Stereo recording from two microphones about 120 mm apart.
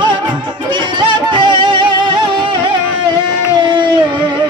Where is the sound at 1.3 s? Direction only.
40° right (ahead or behind).